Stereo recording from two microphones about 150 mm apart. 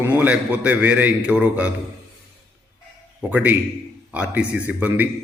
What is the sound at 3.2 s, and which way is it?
A man's voice, 10° right (ahead or behind).